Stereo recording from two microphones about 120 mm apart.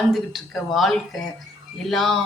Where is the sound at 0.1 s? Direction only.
Centre (ahead or behind).